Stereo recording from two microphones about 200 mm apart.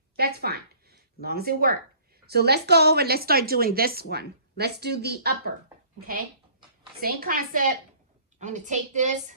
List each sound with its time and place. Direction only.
0.2 s a woman's voice: 50° right (ahead or behind)
7.0 s a woman's voice: 50° right (ahead or behind)